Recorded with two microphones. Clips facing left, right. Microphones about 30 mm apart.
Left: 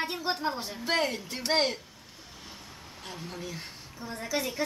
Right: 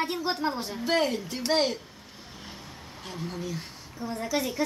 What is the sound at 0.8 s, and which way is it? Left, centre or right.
A child's voice, centre.